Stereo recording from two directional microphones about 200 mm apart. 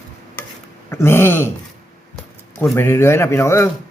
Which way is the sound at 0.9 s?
10° left (ahead or behind).